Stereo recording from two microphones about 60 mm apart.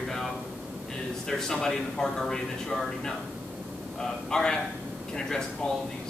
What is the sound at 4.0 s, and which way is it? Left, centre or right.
Speech, centre.